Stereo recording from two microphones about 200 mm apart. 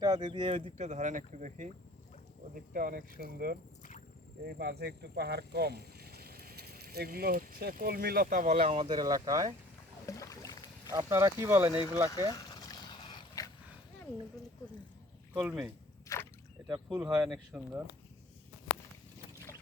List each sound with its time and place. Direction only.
0.0 s speech: 20° right (ahead or behind); by 1.7 s 40° right (ahead or behind)
2.7 s speech: 45° right (ahead or behind)
8.5 s speech: 30° right (ahead or behind)
10.1 s boat: 15° left (ahead or behind)
10.9 s speech: 15° right (ahead or behind)
12.3 s a sound: 20° left (ahead or behind)
15.3 s speech: 5° right (ahead or behind)
16.6 s speech: 20° right (ahead or behind)
17.2 s speech: 5° right (ahead or behind)